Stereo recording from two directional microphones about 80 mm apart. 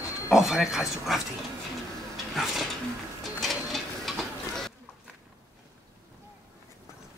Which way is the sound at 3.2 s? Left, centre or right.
Centre.